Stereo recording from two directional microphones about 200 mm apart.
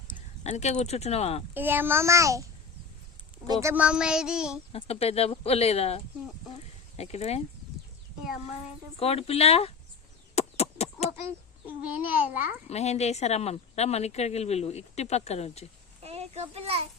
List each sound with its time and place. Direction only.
0.4 s speech: 35° left (ahead or behind)
1.5 s a child's voice: 10° right (ahead or behind)
3.4 s speech: 15° right (ahead or behind)
4.7 s speech: 30° left (ahead or behind)
9.0 s speech: 30° left (ahead or behind)
10.3 s a sound: 30° left (ahead or behind)
11.9 s a child's voice: 10° right (ahead or behind)
12.6 s speech: 30° left (ahead or behind)
16.0 s a child's voice: 30° right (ahead or behind)